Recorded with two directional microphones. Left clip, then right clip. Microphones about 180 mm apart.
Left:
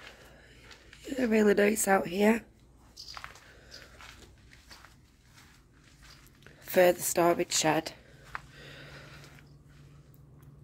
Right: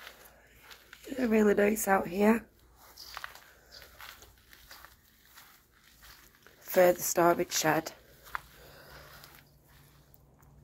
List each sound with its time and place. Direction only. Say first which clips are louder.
0.8 s speech: left 1 dB; 25° left (ahead or behind)
6.4 s a sound: even; 20° left (ahead or behind)
7.1 s a woman's voice: even; 15° left (ahead or behind)